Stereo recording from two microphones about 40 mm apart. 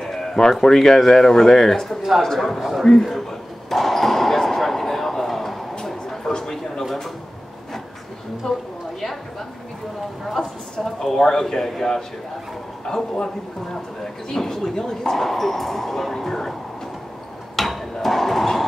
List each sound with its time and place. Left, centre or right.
0.0 s speech: centre
3.7 s basketball bounce: centre
6.3 s a sound: centre
8.4 s a woman's voice: centre
10.2 s speech: centre
14.3 s speech: centre
17.6 s a sound: centre